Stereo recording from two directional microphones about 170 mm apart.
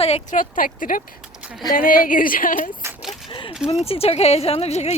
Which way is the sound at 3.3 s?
30° left (ahead or behind).